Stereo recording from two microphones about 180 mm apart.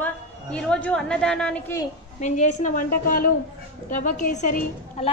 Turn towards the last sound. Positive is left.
turn(degrees=40)  # may be behind; listen again after turning